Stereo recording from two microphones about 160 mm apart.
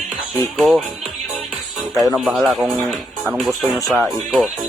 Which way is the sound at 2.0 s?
Centre (ahead or behind).